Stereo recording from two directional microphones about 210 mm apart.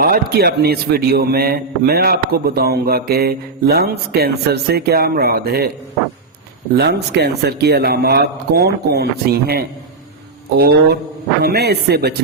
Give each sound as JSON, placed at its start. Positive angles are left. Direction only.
{"t": 0.0, "sound": "a man's voice", "side_deg": -45}
{"t": 6.7, "sound": "a man's voice", "side_deg": -50}
{"t": 11.4, "sound": "a man's voice", "side_deg": -50}